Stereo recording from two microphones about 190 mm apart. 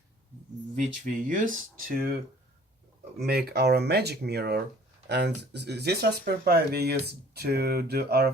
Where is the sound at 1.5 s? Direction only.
50° right (ahead or behind).